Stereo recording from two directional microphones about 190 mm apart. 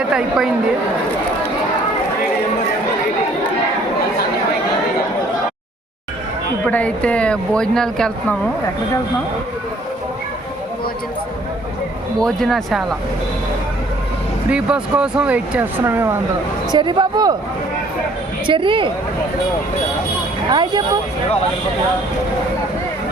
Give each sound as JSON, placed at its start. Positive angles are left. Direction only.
{"t": 0.1, "sound": "speech", "side_deg": -5}
{"t": 6.7, "sound": "speech", "side_deg": 5}
{"t": 12.2, "sound": "speech", "side_deg": 0}
{"t": 14.5, "sound": "speech", "side_deg": -5}
{"t": 16.7, "sound": "speech", "side_deg": -25}
{"t": 18.4, "sound": "speech", "side_deg": -25}
{"t": 20.5, "sound": "speech", "side_deg": -25}